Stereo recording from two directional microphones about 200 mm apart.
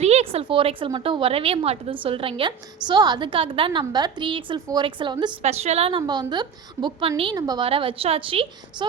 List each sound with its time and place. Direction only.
0.0 s a woman's voice: 30° right (ahead or behind)